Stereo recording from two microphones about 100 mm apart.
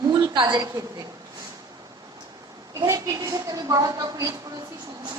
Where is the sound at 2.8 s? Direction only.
35° right (ahead or behind).